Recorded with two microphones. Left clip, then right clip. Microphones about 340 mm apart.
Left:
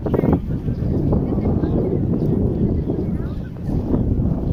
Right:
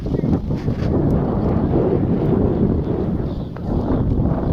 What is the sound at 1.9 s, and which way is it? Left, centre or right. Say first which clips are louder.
Wind noise: right 3 dB; right.